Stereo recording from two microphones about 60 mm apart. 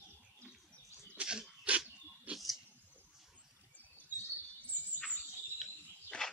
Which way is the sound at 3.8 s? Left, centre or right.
Right.